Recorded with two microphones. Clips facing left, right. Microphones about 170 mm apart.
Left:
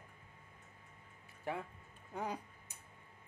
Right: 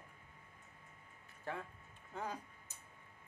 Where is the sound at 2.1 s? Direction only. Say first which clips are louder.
Left 3 dB; 15° left (ahead or behind).